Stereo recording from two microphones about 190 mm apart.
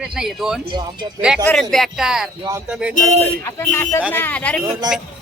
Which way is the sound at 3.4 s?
15° left (ahead or behind).